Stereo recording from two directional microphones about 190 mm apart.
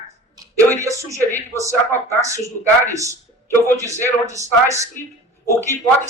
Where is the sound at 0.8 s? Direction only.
15° right (ahead or behind).